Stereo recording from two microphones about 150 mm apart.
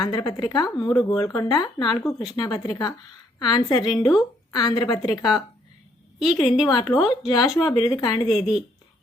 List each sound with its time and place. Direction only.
0.0 s speech: 25° left (ahead or behind)
6.1 s a woman's voice: 5° right (ahead or behind)
6.7 s speech: 25° left (ahead or behind)
8.3 s a woman's voice: 5° right (ahead or behind)